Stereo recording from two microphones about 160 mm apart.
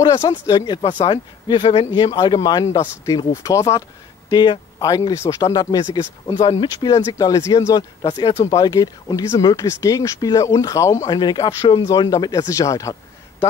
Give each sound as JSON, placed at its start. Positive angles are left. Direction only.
{"t": 0.0, "sound": "speech", "side_deg": 25}
{"t": 8.0, "sound": "speech", "side_deg": 35}